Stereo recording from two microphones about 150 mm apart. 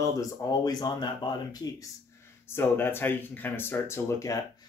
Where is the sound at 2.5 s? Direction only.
15° left (ahead or behind).